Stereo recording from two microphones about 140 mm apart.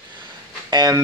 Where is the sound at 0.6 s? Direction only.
30° right (ahead or behind).